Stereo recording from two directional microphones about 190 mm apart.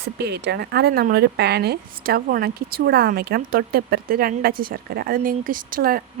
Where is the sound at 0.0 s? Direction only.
60° right (ahead or behind).